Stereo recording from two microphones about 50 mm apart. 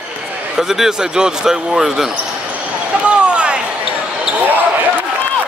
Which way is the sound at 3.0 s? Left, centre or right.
Right.